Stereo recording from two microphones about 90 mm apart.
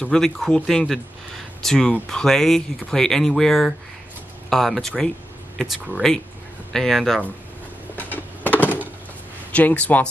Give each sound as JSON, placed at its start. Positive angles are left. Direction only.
{"t": 0.0, "sound": "speech", "side_deg": 5}
{"t": 8.0, "sound": "a sound", "side_deg": 20}
{"t": 9.5, "sound": "speech", "side_deg": 15}